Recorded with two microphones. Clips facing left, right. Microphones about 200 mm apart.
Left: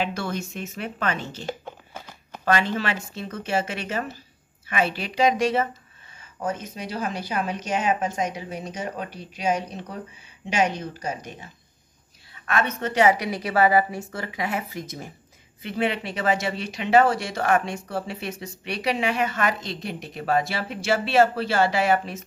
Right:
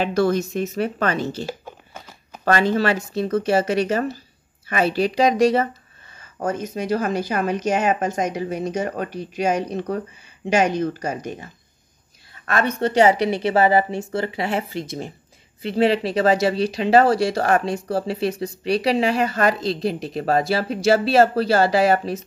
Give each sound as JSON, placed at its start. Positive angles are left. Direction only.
{"t": 0.0, "sound": "speech", "side_deg": -40}
{"t": 2.4, "sound": "speech", "side_deg": -40}
{"t": 12.4, "sound": "a woman's voice", "side_deg": -35}